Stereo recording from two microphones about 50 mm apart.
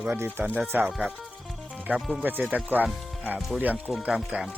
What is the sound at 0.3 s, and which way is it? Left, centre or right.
Speech, right.